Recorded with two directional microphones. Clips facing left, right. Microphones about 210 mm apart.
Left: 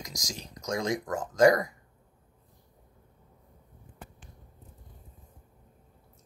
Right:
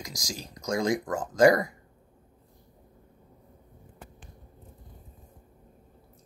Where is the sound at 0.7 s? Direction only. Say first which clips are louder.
Right 3 dB; 30° right (ahead or behind).